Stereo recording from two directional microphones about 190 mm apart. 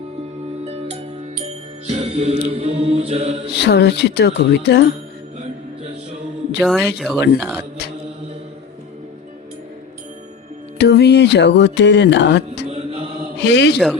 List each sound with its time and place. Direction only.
0.6 s music: 30° right (ahead or behind)
3.6 s music: 60° left (ahead or behind)
6.6 s speech: centre (ahead or behind)
10.8 s music: 60° left (ahead or behind)